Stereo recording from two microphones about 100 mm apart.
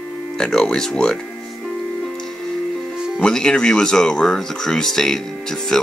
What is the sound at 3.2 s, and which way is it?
Speech, 5° left (ahead or behind).